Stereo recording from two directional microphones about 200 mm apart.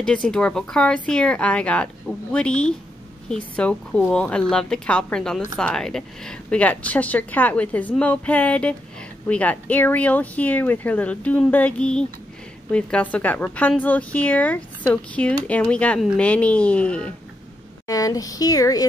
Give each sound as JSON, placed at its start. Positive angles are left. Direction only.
{"t": 0.0, "sound": "speech", "side_deg": 5}
{"t": 17.8, "sound": "speech", "side_deg": 15}